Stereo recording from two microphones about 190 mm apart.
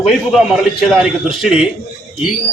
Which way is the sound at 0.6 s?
Centre (ahead or behind).